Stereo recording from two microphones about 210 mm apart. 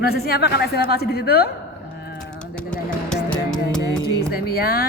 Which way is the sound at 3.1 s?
5° left (ahead or behind).